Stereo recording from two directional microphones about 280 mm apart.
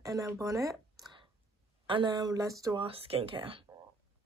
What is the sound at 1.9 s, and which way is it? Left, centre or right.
Speech, centre.